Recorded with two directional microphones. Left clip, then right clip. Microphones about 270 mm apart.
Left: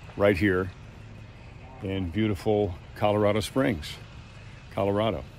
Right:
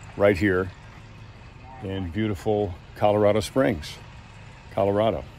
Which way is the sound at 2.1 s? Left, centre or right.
Centre.